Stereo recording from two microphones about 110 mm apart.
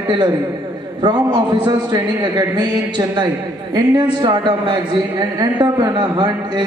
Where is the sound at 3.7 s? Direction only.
40° right (ahead or behind).